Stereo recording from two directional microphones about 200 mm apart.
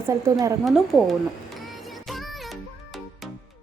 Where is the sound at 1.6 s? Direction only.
Centre (ahead or behind).